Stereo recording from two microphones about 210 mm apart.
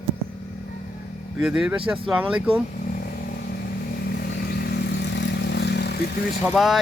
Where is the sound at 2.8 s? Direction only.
40° left (ahead or behind).